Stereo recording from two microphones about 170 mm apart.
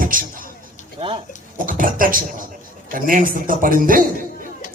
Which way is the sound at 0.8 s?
45° left (ahead or behind).